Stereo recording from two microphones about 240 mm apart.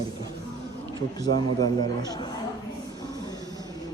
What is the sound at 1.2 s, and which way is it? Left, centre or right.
Speech, centre.